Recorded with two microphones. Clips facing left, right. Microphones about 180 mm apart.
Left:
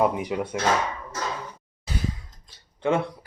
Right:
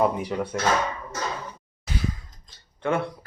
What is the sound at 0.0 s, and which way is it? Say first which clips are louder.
Speech: even; 15° left (ahead or behind).